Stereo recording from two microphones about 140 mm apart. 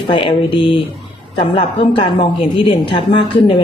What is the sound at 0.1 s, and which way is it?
A woman's voice, 40° left (ahead or behind).